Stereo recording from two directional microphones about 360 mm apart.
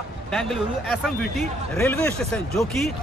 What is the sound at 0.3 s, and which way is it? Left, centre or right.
A man's voice, centre.